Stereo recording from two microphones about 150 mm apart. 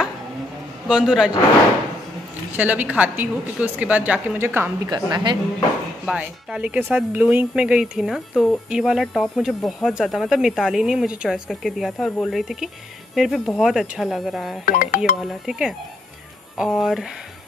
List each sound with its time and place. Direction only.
0.8 s speech: 5° right (ahead or behind)
2.5 s a woman's voice: 10° right (ahead or behind)
4.8 s a woman's voice: 30° right (ahead or behind)
6.0 s speech: 5° right (ahead or behind)
14.6 s speech: 65° left (ahead or behind)
15.2 s speech: 5° right (ahead or behind)